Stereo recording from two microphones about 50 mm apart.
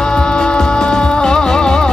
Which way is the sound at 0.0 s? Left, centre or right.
Centre.